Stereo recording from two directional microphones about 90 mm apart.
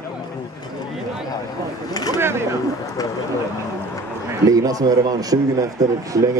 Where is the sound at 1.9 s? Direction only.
45° left (ahead or behind).